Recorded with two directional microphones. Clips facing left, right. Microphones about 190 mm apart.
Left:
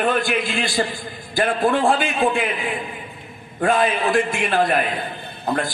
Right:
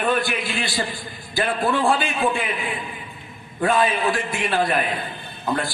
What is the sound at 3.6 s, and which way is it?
A man's voice, 50° left (ahead or behind).